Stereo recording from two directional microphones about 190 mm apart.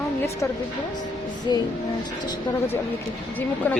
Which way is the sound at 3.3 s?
10° left (ahead or behind).